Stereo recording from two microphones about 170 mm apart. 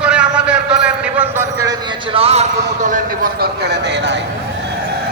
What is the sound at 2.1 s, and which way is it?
Speech, 35° right (ahead or behind).